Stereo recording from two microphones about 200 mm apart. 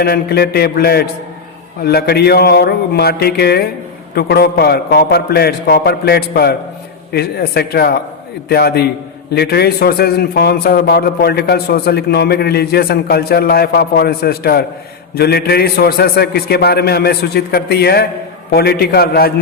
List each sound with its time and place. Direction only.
0.0 s a man's voice: 50° left (ahead or behind)